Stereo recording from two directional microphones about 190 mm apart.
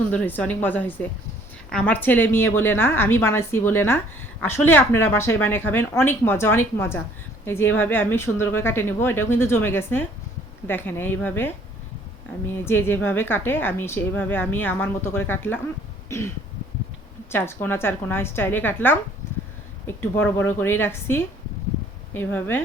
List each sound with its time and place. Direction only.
0.1 s a woman's voice: 10° left (ahead or behind)
16.0 s throat clearing: 15° left (ahead or behind)
17.3 s a woman's voice: 10° left (ahead or behind)